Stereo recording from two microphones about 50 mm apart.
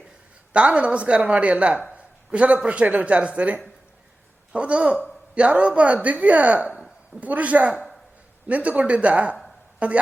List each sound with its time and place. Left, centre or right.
0.5 s a man's voice: right